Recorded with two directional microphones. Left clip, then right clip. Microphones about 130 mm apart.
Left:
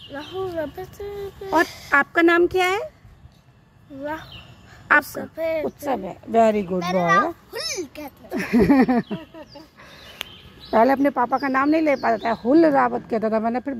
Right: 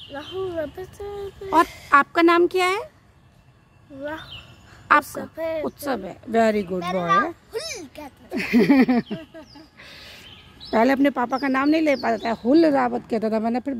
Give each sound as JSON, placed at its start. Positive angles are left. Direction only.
{"t": 0.1, "sound": "speech", "side_deg": -10}
{"t": 4.0, "sound": "speech", "side_deg": -10}
{"t": 10.7, "sound": "speech", "side_deg": -40}
{"t": 12.0, "sound": "speech", "side_deg": -30}
{"t": 12.5, "sound": "speech", "side_deg": -45}